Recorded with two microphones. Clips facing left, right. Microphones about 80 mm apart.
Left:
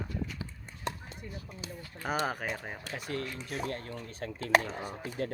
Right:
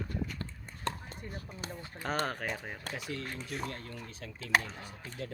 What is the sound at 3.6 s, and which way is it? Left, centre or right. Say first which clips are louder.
Speech: left 4 dB; left.